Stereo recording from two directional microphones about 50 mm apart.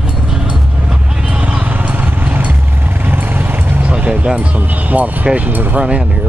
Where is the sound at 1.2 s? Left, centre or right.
Right.